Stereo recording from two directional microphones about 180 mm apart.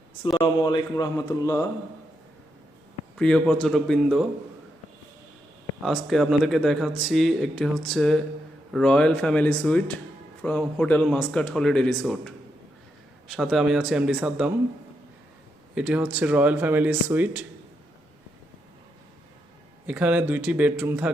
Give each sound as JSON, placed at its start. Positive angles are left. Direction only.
{"t": 0.2, "sound": "speech", "side_deg": 25}
{"t": 3.2, "sound": "a man's voice", "side_deg": 5}
{"t": 5.8, "sound": "a man's voice", "side_deg": 0}
{"t": 15.7, "sound": "speech", "side_deg": -5}
{"t": 19.9, "sound": "speech", "side_deg": -10}